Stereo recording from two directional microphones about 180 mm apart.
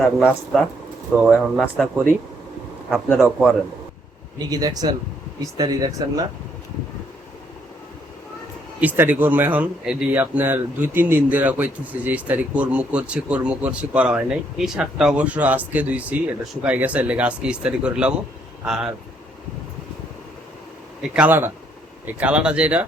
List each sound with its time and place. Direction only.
0.0 s speech: 5° right (ahead or behind)
3.2 s speech: 5° right (ahead or behind)
4.4 s speech: 20° right (ahead or behind)
8.8 s speech: 10° right (ahead or behind)
21.0 s speech: 5° right (ahead or behind)